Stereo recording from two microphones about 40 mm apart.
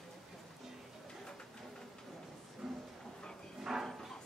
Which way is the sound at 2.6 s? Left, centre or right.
Centre.